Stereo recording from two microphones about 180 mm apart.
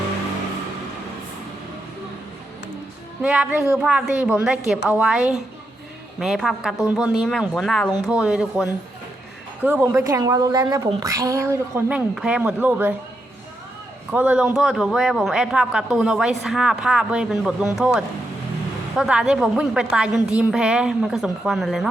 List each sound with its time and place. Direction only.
3.2 s a man's voice: 5° right (ahead or behind)
14.1 s a man's voice: 5° right (ahead or behind)